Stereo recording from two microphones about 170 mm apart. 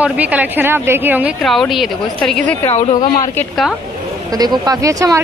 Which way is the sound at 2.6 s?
30° left (ahead or behind).